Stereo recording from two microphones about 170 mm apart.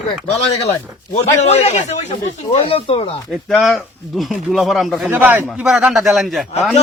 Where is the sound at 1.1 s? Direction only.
40° left (ahead or behind).